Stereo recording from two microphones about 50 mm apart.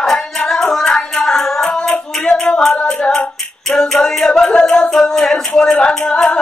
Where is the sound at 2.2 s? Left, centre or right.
Centre.